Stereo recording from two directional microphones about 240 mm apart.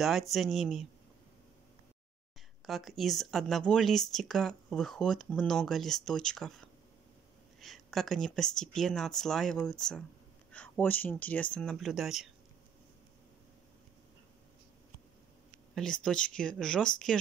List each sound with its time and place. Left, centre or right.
0.0 s speech: centre
2.6 s speech: centre
7.6 s speech: centre
15.7 s speech: centre